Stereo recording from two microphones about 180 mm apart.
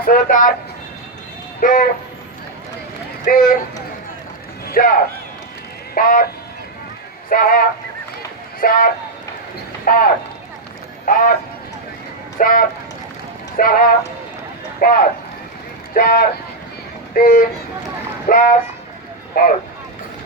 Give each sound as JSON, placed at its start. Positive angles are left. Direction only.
{"t": 0.0, "sound": "speech", "side_deg": 50}
{"t": 1.6, "sound": "speech", "side_deg": 50}
{"t": 3.2, "sound": "speech", "side_deg": 50}
{"t": 4.6, "sound": "speech", "side_deg": 55}
{"t": 7.3, "sound": "speech", "side_deg": 50}
{"t": 12.4, "sound": "speech", "side_deg": 50}